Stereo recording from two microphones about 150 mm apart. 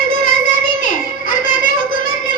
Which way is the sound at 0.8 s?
60° left (ahead or behind).